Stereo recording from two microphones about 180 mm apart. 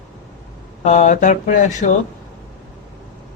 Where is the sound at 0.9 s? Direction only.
40° left (ahead or behind).